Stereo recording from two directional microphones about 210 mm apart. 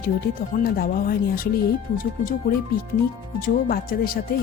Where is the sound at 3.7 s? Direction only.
45° left (ahead or behind).